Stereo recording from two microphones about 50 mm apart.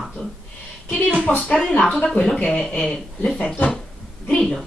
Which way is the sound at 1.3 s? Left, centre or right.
Centre.